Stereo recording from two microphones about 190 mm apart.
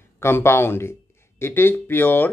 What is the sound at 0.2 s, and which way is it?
Speech, 15° left (ahead or behind).